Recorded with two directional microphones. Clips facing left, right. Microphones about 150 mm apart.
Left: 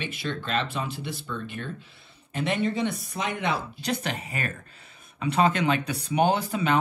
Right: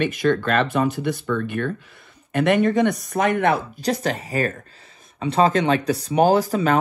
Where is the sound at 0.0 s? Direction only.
55° right (ahead or behind).